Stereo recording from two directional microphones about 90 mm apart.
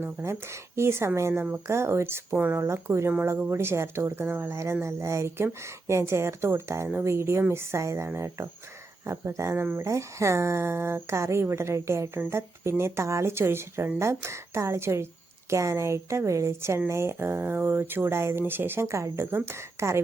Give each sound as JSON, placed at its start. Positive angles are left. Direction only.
{"t": 0.0, "sound": "a woman's voice", "side_deg": -30}
{"t": 1.3, "sound": "speech", "side_deg": -20}
{"t": 1.6, "sound": "a woman's voice", "side_deg": -30}